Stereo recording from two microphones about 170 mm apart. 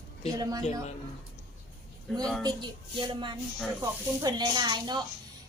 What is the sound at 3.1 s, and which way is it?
A woman's voice, 30° right (ahead or behind).